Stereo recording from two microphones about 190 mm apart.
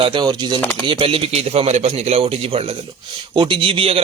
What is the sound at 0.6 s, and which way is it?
Speech, 10° left (ahead or behind).